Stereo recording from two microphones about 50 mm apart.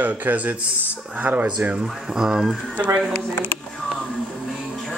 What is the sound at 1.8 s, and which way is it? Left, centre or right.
Speech, centre.